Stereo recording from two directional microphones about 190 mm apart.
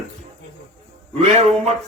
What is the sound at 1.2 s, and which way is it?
Music, 35° right (ahead or behind).